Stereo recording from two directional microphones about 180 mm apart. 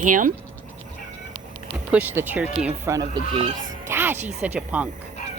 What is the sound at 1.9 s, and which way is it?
Speech, 10° right (ahead or behind).